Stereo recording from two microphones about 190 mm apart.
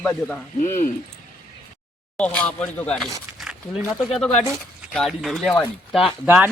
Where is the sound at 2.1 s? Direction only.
5° left (ahead or behind).